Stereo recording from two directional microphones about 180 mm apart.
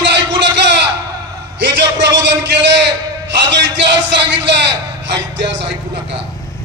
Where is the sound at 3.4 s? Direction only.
85° right.